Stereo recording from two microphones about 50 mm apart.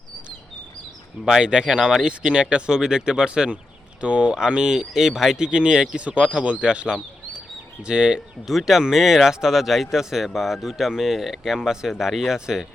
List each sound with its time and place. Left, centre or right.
1.4 s speech: centre
5.5 s speech: centre
8.4 s speech: centre